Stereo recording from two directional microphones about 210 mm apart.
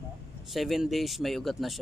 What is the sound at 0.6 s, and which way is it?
A man's voice, centre (ahead or behind).